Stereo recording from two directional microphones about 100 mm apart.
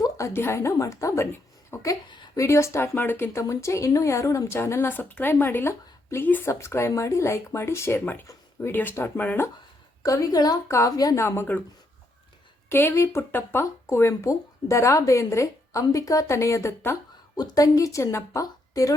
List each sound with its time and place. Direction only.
0.3 s a woman's voice: 25° left (ahead or behind)
10.0 s a woman's voice: 35° left (ahead or behind)
11.2 s speech: 25° left (ahead or behind)
12.6 s speech: 25° left (ahead or behind)
17.3 s a woman's voice: 40° left (ahead or behind)